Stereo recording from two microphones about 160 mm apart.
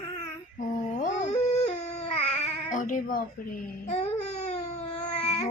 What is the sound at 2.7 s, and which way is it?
Speech, 55° left (ahead or behind).